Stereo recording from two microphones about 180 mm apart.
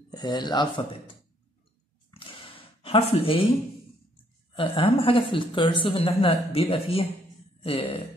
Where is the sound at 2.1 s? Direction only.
30° left (ahead or behind).